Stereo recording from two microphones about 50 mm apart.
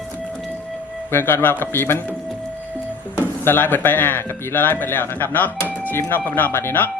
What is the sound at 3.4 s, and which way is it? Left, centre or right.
Speech, left.